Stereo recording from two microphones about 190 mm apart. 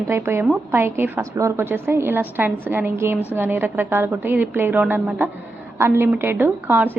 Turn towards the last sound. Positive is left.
turn(degrees=-10)  # may be behind; listen again after turning